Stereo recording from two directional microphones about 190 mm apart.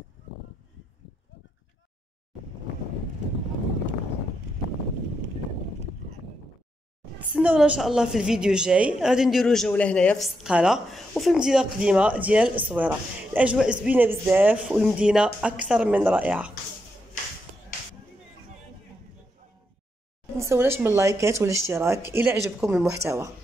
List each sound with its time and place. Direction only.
7.2 s a woman's voice: 5° right (ahead or behind)
20.3 s speech: 15° right (ahead or behind)